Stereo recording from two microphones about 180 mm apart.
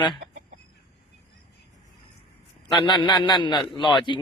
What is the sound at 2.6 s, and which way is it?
Speech, 25° left (ahead or behind).